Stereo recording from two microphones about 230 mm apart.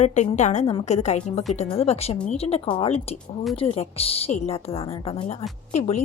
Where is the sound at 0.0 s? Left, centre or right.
Left.